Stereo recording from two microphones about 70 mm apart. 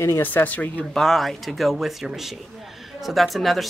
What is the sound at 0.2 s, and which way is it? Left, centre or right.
Speech, left.